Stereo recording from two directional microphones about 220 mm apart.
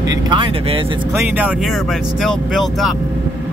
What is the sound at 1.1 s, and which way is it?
Speech, 5° right (ahead or behind).